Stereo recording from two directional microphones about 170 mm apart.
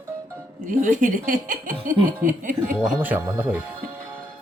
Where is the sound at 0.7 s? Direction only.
50° right (ahead or behind).